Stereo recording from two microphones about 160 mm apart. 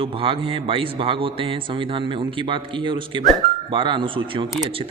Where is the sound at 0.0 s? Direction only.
35° right (ahead or behind).